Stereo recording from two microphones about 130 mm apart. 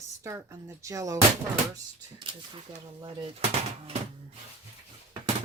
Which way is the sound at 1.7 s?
40° right (ahead or behind).